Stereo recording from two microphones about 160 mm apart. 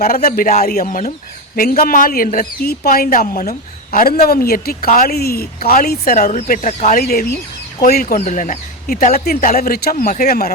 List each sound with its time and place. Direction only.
0.3 s a woman's voice: 65° left (ahead or behind)
0.9 s speech: 50° left (ahead or behind)
1.5 s a woman's voice: 70° left (ahead or behind)
6.1 s speech: 50° left (ahead or behind)
7.0 s a woman's voice: 70° left (ahead or behind)
8.0 s speech: 50° left (ahead or behind); by 10.5 s 70° left (ahead or behind)